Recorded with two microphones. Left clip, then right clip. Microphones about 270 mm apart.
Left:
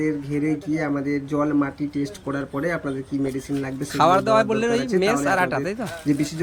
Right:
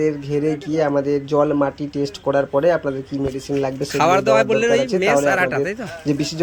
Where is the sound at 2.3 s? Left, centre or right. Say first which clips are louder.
Right 10 dB; right.